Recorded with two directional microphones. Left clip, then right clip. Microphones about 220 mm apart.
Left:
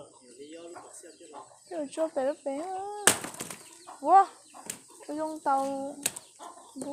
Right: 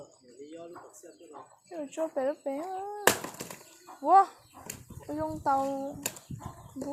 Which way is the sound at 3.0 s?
10° left (ahead or behind).